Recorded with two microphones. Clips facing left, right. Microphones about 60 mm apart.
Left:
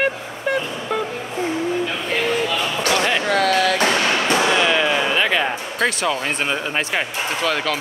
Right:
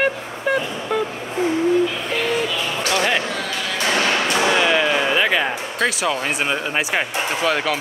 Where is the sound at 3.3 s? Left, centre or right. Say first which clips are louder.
Left 8 dB; left.